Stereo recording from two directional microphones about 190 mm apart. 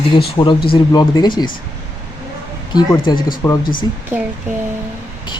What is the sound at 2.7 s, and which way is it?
Speech, 25° left (ahead or behind).